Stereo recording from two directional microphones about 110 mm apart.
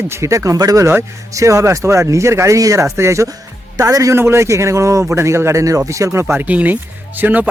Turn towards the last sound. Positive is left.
turn(degrees=-15)  # may be behind; listen again after turning